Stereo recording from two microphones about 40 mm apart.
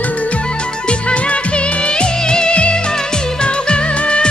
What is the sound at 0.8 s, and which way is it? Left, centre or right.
Music, left.